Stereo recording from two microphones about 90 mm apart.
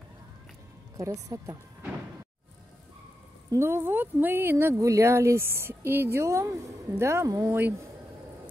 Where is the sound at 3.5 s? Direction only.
30° right (ahead or behind).